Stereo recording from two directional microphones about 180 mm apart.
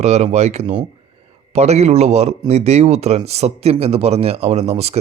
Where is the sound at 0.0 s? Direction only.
40° right (ahead or behind).